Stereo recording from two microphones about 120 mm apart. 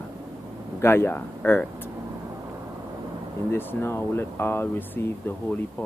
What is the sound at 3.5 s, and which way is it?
Speech, 20° left (ahead or behind).